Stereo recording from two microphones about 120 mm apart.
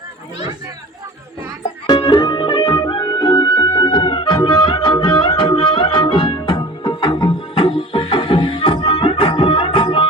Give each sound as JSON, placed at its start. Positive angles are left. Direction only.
{"t": 2.2, "sound": "music", "side_deg": 45}